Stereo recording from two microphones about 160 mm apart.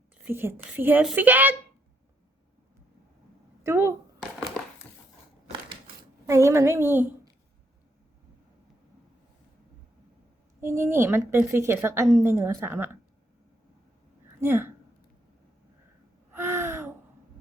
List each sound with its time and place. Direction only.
0.3 s a woman's voice: 15° right (ahead or behind)
3.6 s speech: 15° right (ahead or behind)
4.2 s crushing: 5° left (ahead or behind)
6.2 s a woman's voice: 20° right (ahead or behind)
10.6 s a woman's voice: 15° right (ahead or behind)
14.4 s a woman's voice: 15° right (ahead or behind)
16.3 s gasp: 15° right (ahead or behind)